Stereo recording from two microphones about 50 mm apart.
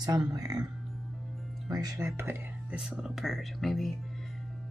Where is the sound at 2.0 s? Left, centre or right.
Right.